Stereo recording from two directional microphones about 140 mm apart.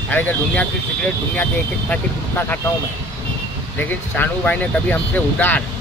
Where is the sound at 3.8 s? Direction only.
10° left (ahead or behind).